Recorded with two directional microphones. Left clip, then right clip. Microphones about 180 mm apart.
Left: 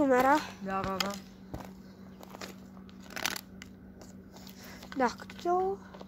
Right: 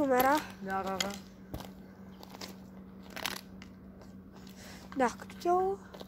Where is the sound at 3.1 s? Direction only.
60° left (ahead or behind).